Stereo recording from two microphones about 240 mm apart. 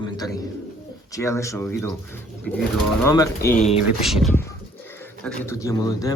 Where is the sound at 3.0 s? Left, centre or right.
Centre.